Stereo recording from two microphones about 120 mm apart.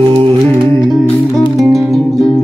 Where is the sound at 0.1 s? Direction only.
50° right (ahead or behind).